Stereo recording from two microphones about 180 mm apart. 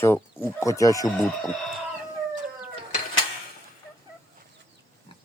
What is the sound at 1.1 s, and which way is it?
Speech, centre (ahead or behind).